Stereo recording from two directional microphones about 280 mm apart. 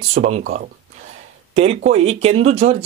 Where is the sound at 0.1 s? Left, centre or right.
Right.